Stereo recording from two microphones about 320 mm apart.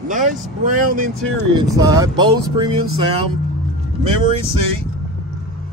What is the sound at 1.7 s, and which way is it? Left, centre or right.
Speech, centre.